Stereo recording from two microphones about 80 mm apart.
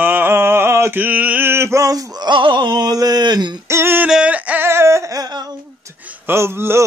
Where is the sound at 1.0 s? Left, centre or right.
Right.